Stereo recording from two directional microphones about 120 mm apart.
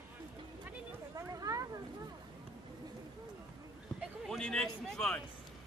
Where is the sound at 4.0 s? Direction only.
5° left (ahead or behind).